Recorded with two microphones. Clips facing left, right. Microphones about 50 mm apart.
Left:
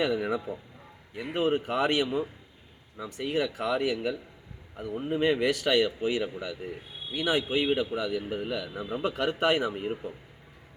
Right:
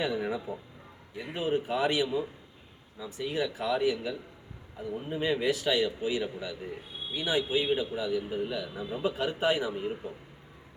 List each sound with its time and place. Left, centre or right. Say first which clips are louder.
0.0 s a man's voice: left 3 dB; left
3.0 s speech: left 2 dB; left
7.1 s speech: left 2 dB; left